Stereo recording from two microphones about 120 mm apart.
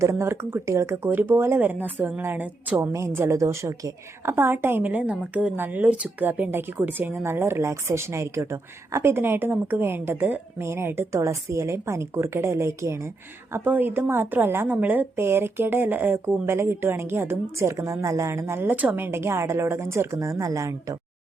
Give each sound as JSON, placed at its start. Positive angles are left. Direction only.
{"t": 0.0, "sound": "a woman's voice", "side_deg": -25}